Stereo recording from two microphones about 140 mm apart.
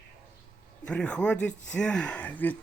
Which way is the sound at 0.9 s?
5° left (ahead or behind).